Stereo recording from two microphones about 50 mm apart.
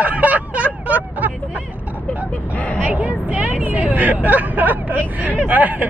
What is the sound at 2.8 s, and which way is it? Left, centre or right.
Speech, right.